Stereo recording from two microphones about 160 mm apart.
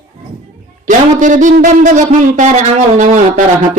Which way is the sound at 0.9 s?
55° right (ahead or behind).